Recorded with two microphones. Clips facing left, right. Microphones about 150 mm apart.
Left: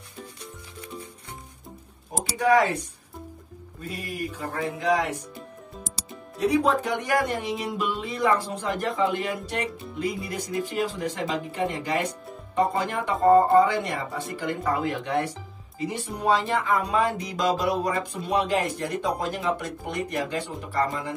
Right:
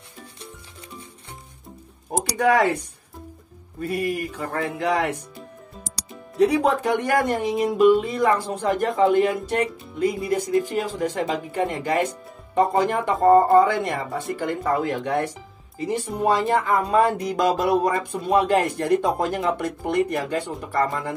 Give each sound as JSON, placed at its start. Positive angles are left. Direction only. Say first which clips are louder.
{"t": 2.3, "sound": "music", "louder": "right 1 dB", "side_deg": -60}
{"t": 3.8, "sound": "music", "louder": "right 8 dB", "side_deg": -70}
{"t": 6.3, "sound": "speech", "louder": "right 3 dB", "side_deg": -65}